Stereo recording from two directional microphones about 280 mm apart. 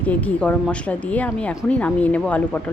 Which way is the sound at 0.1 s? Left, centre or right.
Centre.